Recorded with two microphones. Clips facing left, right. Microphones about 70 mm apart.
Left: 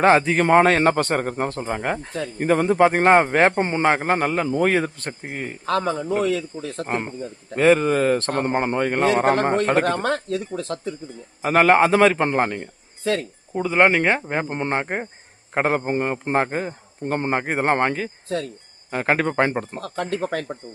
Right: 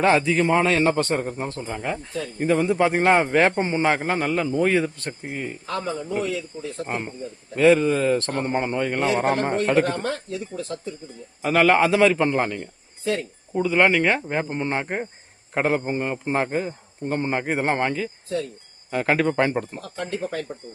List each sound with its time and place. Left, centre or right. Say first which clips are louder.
0.0 s a man's voice: left 3 dB; left
5.6 s a man's voice: left 7 dB; left
6.0 s speech: left 4 dB; left
6.8 s a man's voice: left 4 dB; left
9.8 s speech: left 4 dB; left
11.4 s a man's voice: left 2 dB; left
19.8 s speech: left 3 dB; left